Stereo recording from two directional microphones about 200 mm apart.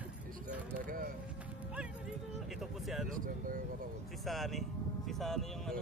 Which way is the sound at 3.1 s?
45° right (ahead or behind).